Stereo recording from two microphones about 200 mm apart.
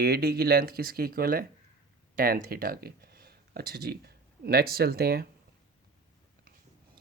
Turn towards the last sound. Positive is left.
turn(degrees=-50)  # may be behind; listen again after turning